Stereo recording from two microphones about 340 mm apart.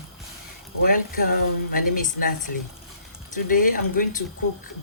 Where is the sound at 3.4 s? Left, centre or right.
Left.